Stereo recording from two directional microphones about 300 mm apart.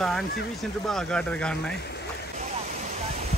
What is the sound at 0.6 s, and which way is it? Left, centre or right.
Speech, centre.